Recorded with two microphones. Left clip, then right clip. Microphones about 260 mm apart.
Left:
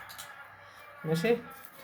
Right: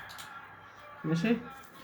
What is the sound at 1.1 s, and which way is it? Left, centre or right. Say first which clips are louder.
Speech: left 4 dB; left.